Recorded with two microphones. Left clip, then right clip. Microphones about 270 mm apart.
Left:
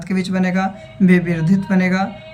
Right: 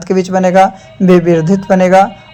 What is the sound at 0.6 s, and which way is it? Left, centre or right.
Speech, centre.